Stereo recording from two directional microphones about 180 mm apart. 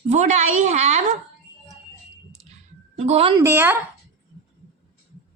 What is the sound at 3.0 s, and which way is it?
Speech, 35° right (ahead or behind).